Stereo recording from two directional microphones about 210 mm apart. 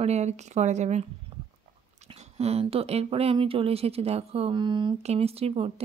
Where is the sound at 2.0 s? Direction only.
30° right (ahead or behind).